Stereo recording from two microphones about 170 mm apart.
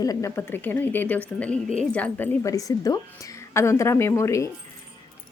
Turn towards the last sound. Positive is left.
turn(degrees=20)  # may be behind; listen again after turning